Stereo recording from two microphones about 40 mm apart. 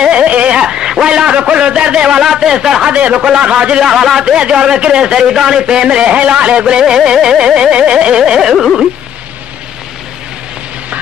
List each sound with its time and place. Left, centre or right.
0.0 s a sound: right
0.6 s a man's voice: centre
2.9 s a man's voice: right
3.8 s carnatic music: centre
4.2 s a man's voice: right
6.8 s a man's voice: centre
8.2 s carnatic music: centre